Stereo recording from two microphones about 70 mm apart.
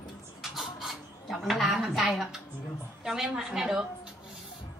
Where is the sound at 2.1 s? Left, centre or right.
Centre.